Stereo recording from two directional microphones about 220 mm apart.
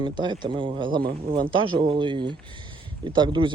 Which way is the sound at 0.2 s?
20° right (ahead or behind).